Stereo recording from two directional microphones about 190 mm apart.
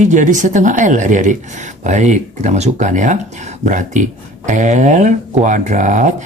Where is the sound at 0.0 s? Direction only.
40° right (ahead or behind).